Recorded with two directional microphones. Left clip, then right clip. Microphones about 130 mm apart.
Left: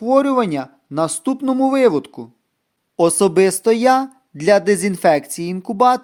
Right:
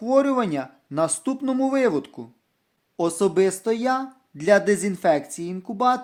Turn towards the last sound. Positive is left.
turn(degrees=55)  # may be behind; listen again after turning